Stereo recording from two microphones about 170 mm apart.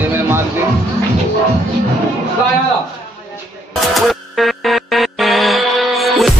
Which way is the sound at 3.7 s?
Centre (ahead or behind).